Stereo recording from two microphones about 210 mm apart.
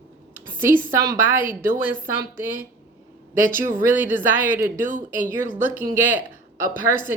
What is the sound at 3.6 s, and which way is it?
Speech, 10° right (ahead or behind).